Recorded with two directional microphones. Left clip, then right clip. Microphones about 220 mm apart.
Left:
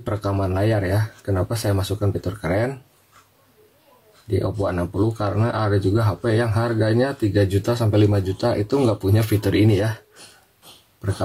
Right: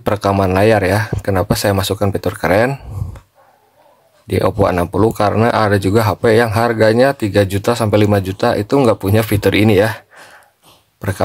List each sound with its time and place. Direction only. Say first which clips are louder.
0.0 s speech: right 10 dB; 45° right (ahead or behind)
4.4 s speech: right 11 dB; 40° right (ahead or behind)